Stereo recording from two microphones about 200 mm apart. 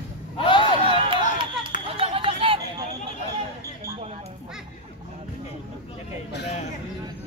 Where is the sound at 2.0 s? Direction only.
25° right (ahead or behind).